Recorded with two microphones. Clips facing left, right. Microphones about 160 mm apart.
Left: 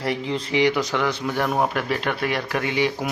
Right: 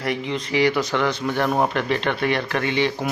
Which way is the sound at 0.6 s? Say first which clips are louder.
Right 1 dB; 15° left (ahead or behind).